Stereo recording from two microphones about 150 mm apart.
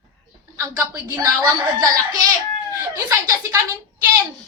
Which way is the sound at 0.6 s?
20° right (ahead or behind).